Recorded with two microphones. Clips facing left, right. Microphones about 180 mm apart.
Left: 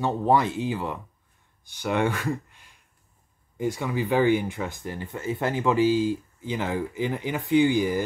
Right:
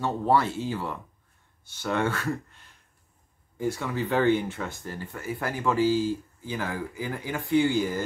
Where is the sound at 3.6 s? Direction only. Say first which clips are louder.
Left 2 dB; 15° left (ahead or behind).